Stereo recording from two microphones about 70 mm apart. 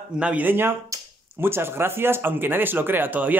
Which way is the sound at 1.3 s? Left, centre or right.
Right.